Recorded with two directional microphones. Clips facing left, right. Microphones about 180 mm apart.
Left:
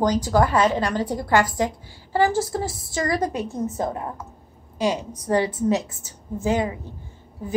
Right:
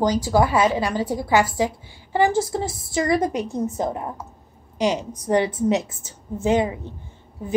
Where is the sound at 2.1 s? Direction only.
20° right (ahead or behind).